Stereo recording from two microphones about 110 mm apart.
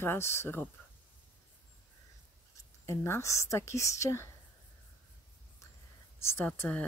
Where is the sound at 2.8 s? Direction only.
25° left (ahead or behind).